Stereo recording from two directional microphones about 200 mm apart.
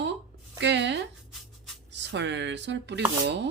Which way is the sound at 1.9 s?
60° right (ahead or behind).